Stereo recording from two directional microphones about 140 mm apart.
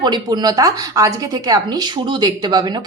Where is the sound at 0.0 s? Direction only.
30° right (ahead or behind).